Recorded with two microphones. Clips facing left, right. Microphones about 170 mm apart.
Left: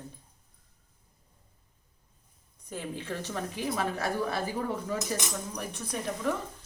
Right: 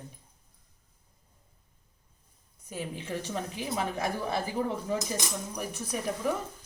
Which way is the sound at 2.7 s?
10° right (ahead or behind).